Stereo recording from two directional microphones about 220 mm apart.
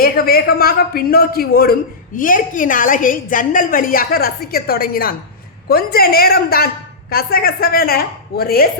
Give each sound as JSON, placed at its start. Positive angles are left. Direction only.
{"t": 0.0, "sound": "a woman's voice", "side_deg": 45}